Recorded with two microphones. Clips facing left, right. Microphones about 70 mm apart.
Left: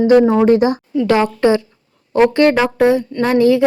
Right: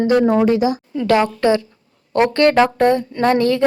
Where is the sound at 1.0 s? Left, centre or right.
Left.